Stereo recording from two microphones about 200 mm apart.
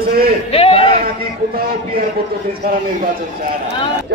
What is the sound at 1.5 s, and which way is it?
Speech, 50° right (ahead or behind).